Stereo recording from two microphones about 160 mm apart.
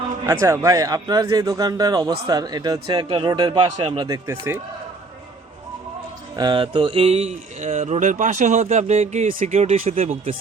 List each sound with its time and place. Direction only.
0.3 s a man's voice: 15° right (ahead or behind)
6.3 s speech: 30° right (ahead or behind)